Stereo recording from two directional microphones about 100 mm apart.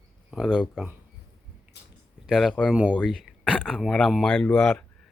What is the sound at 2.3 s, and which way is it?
Speech, centre (ahead or behind).